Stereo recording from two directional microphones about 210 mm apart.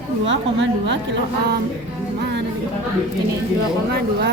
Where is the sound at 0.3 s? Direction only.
60° right (ahead or behind).